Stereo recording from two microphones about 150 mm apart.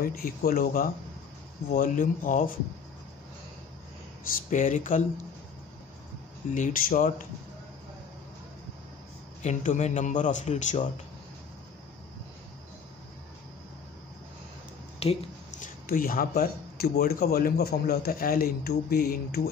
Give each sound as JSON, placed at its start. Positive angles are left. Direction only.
{"t": 0.0, "sound": "speech", "side_deg": 75}
{"t": 4.5, "sound": "speech", "side_deg": 55}
{"t": 6.5, "sound": "speech", "side_deg": 65}
{"t": 9.4, "sound": "a man's voice", "side_deg": 55}
{"t": 15.0, "sound": "a sound", "side_deg": 40}
{"t": 15.6, "sound": "speech", "side_deg": 70}